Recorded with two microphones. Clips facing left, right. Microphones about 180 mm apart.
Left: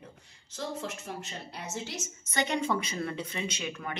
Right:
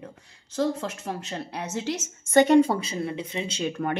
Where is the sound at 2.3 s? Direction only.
45° right (ahead or behind).